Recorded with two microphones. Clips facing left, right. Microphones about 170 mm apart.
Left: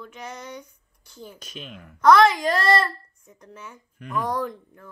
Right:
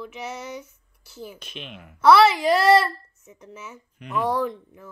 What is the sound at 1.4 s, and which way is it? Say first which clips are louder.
Speech: even; 40° left (ahead or behind).